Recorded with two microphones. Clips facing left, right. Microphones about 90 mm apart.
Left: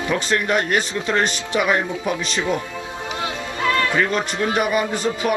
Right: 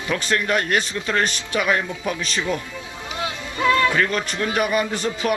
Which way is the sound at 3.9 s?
20° left (ahead or behind).